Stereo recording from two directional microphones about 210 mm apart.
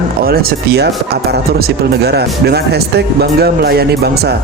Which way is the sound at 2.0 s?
50° right (ahead or behind).